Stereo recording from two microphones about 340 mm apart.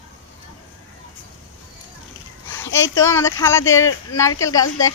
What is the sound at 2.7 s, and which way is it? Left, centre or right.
Speech, left.